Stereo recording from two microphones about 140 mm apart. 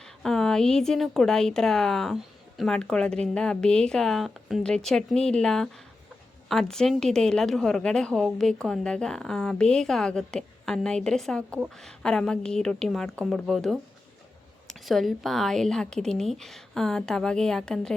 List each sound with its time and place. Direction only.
0.0 s a woman's voice: 5° left (ahead or behind)